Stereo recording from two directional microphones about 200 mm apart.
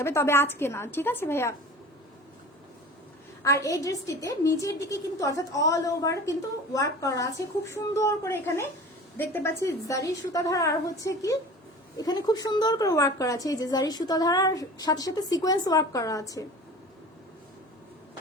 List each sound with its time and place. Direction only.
0.0 s a woman's voice: 10° left (ahead or behind)
3.4 s a woman's voice: 15° left (ahead or behind)